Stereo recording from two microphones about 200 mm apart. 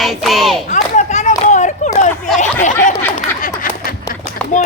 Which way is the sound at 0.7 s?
35° left (ahead or behind).